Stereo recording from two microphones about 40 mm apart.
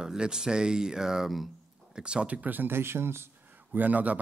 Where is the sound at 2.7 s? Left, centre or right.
Right.